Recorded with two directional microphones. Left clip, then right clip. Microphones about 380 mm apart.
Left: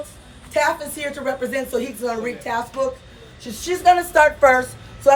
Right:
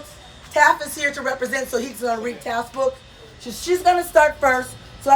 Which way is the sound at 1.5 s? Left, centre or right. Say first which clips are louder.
Even; centre.